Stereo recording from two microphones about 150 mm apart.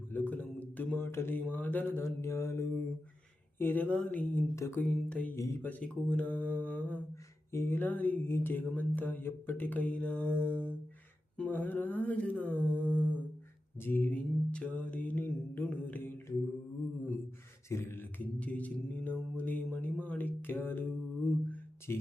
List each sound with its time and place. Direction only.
0.1 s a sound: 10° left (ahead or behind)
1.5 s music: 10° left (ahead or behind)
17.7 s music: 15° left (ahead or behind)
21.9 s music: 15° left (ahead or behind)